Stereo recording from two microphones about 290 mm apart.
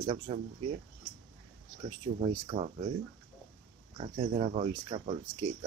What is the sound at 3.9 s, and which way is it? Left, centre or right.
Speech, centre.